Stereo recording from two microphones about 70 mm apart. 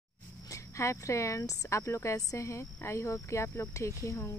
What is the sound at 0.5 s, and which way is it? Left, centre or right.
Speech, left.